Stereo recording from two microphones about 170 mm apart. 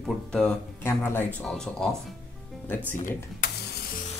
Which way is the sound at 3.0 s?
50° left (ahead or behind).